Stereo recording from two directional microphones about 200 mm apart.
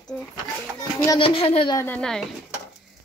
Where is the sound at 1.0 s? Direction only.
25° left (ahead or behind).